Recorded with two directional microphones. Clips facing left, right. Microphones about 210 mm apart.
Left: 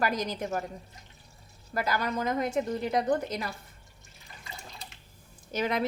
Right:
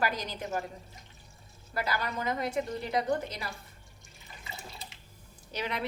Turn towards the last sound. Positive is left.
turn(degrees=45)  # may be behind; listen again after turning